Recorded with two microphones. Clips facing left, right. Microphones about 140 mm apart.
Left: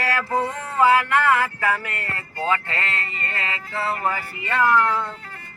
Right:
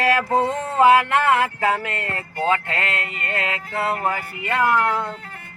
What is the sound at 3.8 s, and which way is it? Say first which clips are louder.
Speech: right 1 dB; 50° right (ahead or behind).